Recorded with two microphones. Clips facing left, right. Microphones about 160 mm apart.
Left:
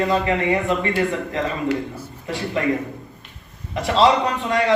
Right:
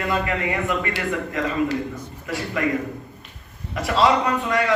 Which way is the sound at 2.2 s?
25° left (ahead or behind).